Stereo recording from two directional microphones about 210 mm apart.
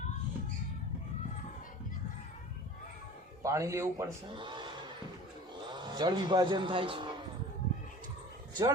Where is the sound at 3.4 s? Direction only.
15° right (ahead or behind).